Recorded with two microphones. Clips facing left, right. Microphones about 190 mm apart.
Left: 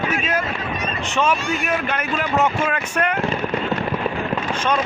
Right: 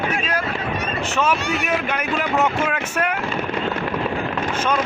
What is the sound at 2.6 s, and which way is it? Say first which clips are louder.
Boat: left 1 dB; 5° right (ahead or behind).